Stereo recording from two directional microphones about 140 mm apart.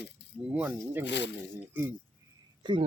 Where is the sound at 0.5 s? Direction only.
15° right (ahead or behind).